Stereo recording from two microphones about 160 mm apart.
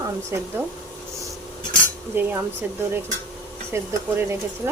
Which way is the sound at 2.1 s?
10° right (ahead or behind).